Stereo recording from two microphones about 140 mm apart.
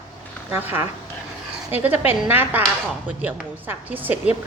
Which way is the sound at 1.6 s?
10° right (ahead or behind).